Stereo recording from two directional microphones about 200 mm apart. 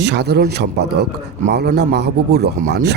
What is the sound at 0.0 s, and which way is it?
Speech, 55° right (ahead or behind).